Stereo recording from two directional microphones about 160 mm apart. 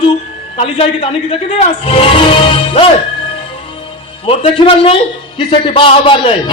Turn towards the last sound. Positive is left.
turn(degrees=35)  # may be behind; listen again after turning